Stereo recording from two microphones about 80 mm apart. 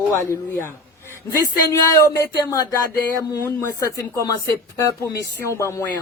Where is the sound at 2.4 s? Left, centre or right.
Left.